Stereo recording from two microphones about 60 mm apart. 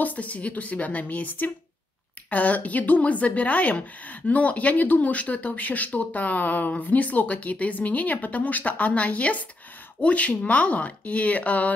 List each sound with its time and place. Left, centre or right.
0.0 s speech: left